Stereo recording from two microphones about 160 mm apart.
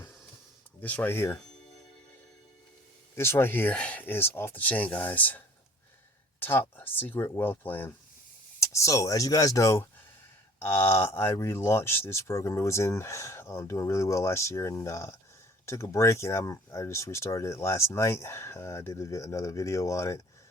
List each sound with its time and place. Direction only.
0.8 s speech: 10° left (ahead or behind)
3.2 s speech: 15° left (ahead or behind)
6.4 s speech: 10° left (ahead or behind)